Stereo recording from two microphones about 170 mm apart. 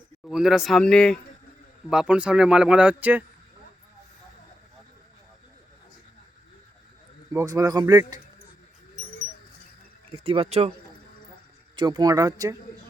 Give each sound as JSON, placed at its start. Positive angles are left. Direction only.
{"t": 0.3, "sound": "speech", "side_deg": 0}
{"t": 7.3, "sound": "speech", "side_deg": -20}
{"t": 10.1, "sound": "speech", "side_deg": -35}
{"t": 11.8, "sound": "speech", "side_deg": -25}